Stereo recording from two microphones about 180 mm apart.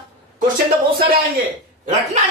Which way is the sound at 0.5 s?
55° right (ahead or behind).